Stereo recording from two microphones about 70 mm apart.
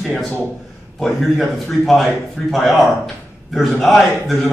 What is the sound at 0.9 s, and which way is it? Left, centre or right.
A man's voice, centre.